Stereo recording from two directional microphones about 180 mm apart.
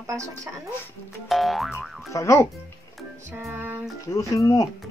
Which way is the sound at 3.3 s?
15° right (ahead or behind).